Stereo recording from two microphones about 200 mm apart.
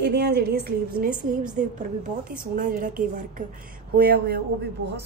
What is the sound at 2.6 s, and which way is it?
A woman's voice, 45° right (ahead or behind).